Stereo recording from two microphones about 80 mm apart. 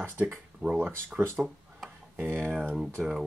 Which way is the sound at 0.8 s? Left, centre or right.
Right.